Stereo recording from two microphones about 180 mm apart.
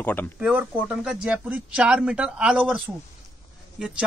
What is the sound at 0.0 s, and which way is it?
Speech, 10° left (ahead or behind).